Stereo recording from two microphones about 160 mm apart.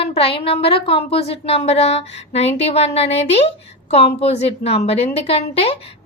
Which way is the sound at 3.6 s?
40° left (ahead or behind).